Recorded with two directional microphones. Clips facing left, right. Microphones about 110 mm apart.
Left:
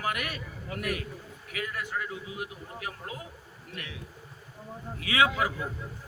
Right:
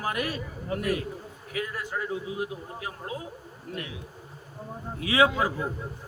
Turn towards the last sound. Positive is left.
turn(degrees=-30)  # may be behind; listen again after turning